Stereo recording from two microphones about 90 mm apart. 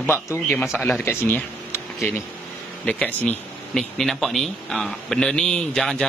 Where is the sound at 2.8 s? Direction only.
15° left (ahead or behind).